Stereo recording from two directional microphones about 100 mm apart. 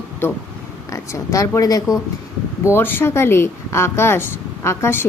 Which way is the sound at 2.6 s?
20° left (ahead or behind).